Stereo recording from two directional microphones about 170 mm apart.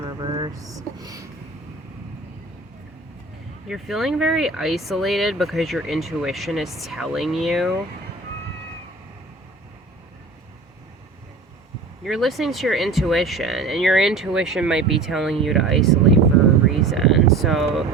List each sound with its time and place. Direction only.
0.0 s vehicle: 25° right (ahead or behind)
0.9 s a sound: 20° right (ahead or behind)
3.7 s speech: centre (ahead or behind)
12.0 s speech: centre (ahead or behind)